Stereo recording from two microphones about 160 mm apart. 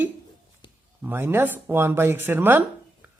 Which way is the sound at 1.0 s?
15° right (ahead or behind).